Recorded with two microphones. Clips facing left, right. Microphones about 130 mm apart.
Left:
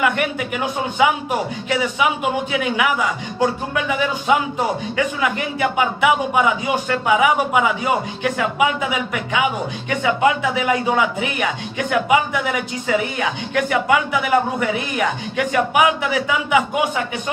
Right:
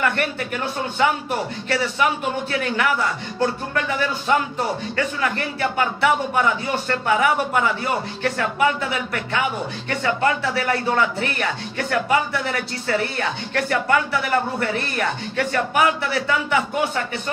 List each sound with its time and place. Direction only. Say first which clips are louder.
0.0 s a man's voice: left 3 dB; 10° left (ahead or behind)